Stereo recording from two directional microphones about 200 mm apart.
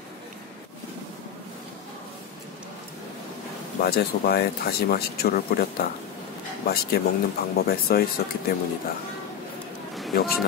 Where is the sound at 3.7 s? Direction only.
50° left (ahead or behind).